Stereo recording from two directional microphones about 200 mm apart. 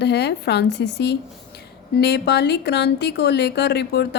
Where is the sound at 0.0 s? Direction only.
55° left (ahead or behind).